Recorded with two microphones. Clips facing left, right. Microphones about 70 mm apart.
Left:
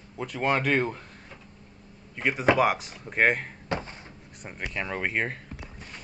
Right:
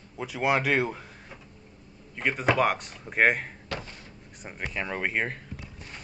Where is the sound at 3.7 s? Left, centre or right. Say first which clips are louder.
Left 7 dB; left.